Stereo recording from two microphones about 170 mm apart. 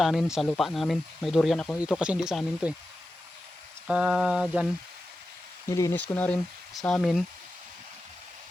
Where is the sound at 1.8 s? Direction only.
5° right (ahead or behind).